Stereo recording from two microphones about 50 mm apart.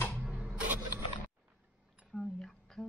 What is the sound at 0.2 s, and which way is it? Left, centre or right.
Printer, right.